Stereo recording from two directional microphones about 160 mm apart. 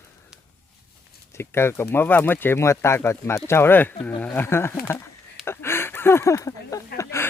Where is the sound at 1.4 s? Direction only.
15° left (ahead or behind).